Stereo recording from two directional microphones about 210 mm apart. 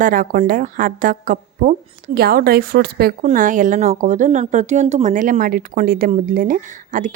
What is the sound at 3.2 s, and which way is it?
Speech, 40° right (ahead or behind).